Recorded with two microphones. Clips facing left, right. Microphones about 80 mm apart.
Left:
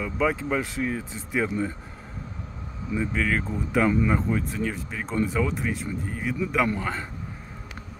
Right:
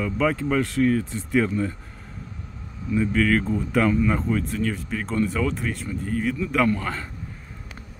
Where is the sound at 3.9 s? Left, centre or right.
Centre.